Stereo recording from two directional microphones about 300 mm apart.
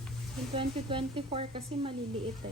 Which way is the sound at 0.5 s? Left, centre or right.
Centre.